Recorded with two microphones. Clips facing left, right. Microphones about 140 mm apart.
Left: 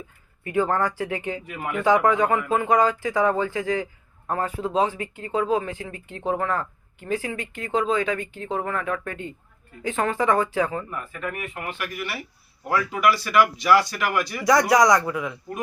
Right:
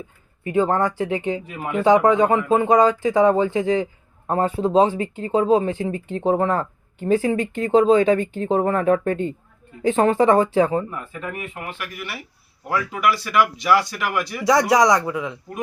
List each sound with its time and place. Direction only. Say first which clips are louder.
0.4 s speech: right 3 dB; 20° right (ahead or behind)
11.5 s speech: left 1 dB; 5° right (ahead or behind); by 15.4 s 20° right (ahead or behind)